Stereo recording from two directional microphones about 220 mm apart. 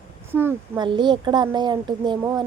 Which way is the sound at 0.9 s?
20° right (ahead or behind).